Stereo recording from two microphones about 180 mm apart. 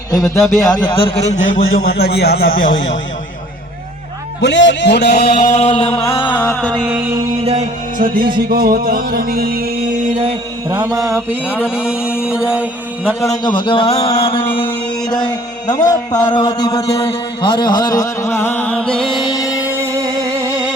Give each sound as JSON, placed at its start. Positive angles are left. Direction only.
{"t": 0.1, "sound": "a man's voice", "side_deg": 20}
{"t": 1.7, "sound": "a man's voice", "side_deg": 60}
{"t": 4.4, "sound": "a man's voice", "side_deg": 85}
{"t": 5.5, "sound": "a man's voice", "side_deg": 30}
{"t": 6.3, "sound": "music", "side_deg": 10}
{"t": 6.8, "sound": "a sound", "side_deg": -10}
{"t": 7.9, "sound": "music", "side_deg": -50}
{"t": 10.7, "sound": "mantra", "side_deg": -20}
{"t": 13.1, "sound": "a man's voice", "side_deg": 20}
{"t": 17.0, "sound": "music", "side_deg": 30}
{"t": 19.2, "sound": "music", "side_deg": 25}
{"t": 19.5, "sound": "music", "side_deg": -10}